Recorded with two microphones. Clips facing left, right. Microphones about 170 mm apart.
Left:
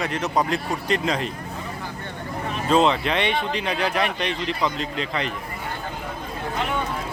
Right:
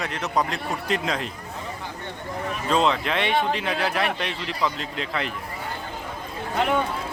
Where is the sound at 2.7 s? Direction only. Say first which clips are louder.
Left 3 dB; centre (ahead or behind).